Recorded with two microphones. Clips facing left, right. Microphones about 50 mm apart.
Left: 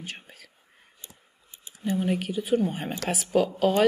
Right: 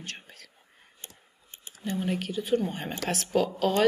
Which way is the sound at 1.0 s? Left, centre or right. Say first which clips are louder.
Right 3 dB; right.